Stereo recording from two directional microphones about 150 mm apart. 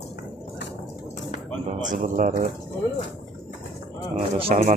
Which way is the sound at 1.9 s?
60° right (ahead or behind).